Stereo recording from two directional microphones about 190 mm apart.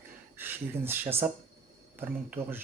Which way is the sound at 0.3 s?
10° right (ahead or behind).